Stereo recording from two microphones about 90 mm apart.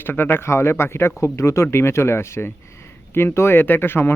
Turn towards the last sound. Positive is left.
turn(degrees=25)  # may be behind; listen again after turning